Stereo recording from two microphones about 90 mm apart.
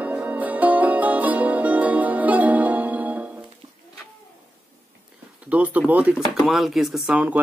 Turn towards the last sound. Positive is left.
turn(degrees=-20)  # may be behind; listen again after turning